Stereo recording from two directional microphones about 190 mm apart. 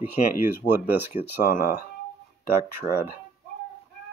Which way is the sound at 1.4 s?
45° left (ahead or behind).